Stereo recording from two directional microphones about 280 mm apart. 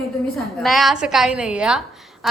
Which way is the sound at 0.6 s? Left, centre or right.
Centre.